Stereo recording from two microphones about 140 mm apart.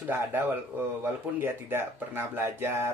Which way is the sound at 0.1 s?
15° right (ahead or behind).